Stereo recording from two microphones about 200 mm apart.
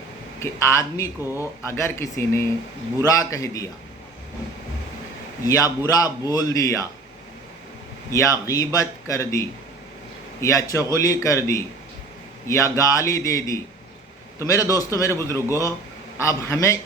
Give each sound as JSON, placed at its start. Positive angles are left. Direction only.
{"t": 0.3, "sound": "a man's voice", "side_deg": 15}
{"t": 5.5, "sound": "a man's voice", "side_deg": 15}
{"t": 8.1, "sound": "a man's voice", "side_deg": 15}